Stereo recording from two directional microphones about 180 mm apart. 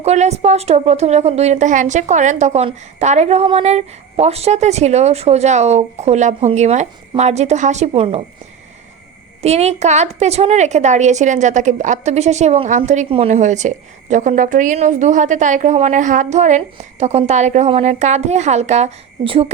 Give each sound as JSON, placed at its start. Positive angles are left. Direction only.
{"t": 0.0, "sound": "a woman's voice", "side_deg": -35}
{"t": 9.4, "sound": "a woman's voice", "side_deg": -35}